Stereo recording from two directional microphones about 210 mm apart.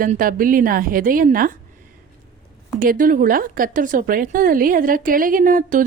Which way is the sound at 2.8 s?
40° right (ahead or behind).